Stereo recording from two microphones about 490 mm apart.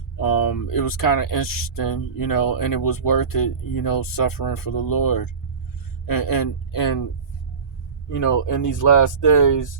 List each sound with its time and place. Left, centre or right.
0.2 s speech: left
8.1 s speech: left